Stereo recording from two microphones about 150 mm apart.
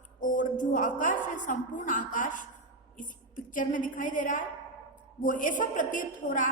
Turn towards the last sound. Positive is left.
turn(degrees=60)  # may be behind; listen again after turning